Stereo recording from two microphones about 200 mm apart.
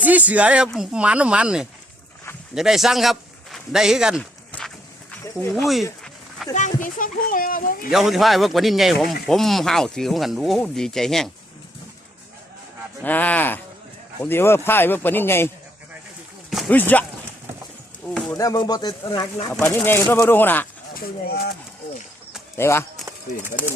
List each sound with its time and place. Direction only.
0.0 s speech: 10° right (ahead or behind)
5.5 s speech: centre (ahead or behind)
6.5 s speech: 35° left (ahead or behind)
7.9 s speech: centre (ahead or behind)
13.0 s speech: 10° left (ahead or behind)
18.1 s a sound: 5° left (ahead or behind)
18.3 s speech: 20° left (ahead or behind)
20.9 s speech: 50° left (ahead or behind)
22.5 s speech: 10° left (ahead or behind)
23.0 s speech: 10° right (ahead or behind)